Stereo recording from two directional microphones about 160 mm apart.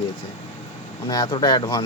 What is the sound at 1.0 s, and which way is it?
Speech, 25° left (ahead or behind).